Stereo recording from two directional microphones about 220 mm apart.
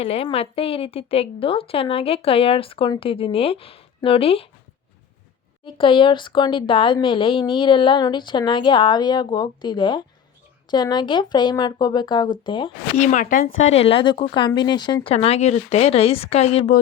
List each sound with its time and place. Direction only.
0.0 s a woman's voice: 25° left (ahead or behind)
5.6 s a woman's voice: 25° left (ahead or behind)
13.0 s a woman's voice: 35° left (ahead or behind)